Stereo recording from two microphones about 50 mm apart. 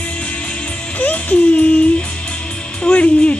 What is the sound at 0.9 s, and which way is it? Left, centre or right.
Music, left.